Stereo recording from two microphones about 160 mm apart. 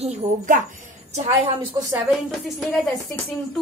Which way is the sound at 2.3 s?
Centre (ahead or behind).